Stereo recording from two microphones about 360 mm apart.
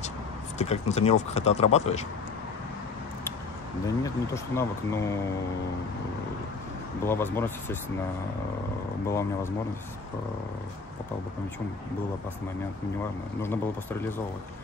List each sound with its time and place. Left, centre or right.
0.6 s speech: centre
3.8 s speech: centre
7.1 s speech: centre
9.0 s speech: centre